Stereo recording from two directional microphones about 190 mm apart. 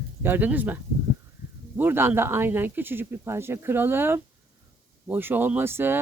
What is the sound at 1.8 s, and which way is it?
Speech, 10° right (ahead or behind).